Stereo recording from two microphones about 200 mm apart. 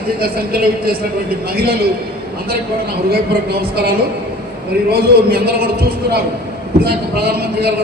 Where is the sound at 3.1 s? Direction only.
50° right (ahead or behind).